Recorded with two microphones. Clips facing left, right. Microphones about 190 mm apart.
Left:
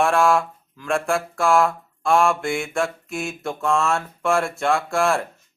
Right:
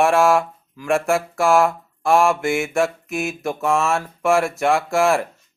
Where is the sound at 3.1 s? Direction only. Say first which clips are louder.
Right 3 dB; 15° right (ahead or behind).